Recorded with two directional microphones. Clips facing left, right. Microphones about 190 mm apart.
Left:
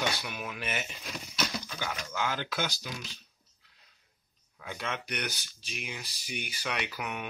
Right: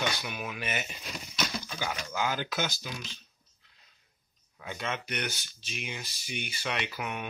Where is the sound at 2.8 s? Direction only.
Centre (ahead or behind).